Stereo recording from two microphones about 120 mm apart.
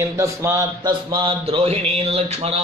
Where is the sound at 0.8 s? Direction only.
50° right (ahead or behind).